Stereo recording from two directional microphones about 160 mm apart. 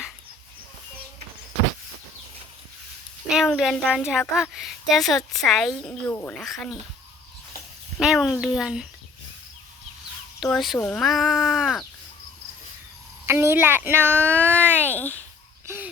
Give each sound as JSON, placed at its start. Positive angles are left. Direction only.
{"t": 3.2, "sound": "speech", "side_deg": -5}
{"t": 6.1, "sound": "speech", "side_deg": 15}
{"t": 6.3, "sound": "speech", "side_deg": 0}
{"t": 7.9, "sound": "speech", "side_deg": 0}
{"t": 10.5, "sound": "speech", "side_deg": 0}
{"t": 13.2, "sound": "speech", "side_deg": -15}
{"t": 14.9, "sound": "speech", "side_deg": 10}
{"t": 15.6, "sound": "a sound", "side_deg": -15}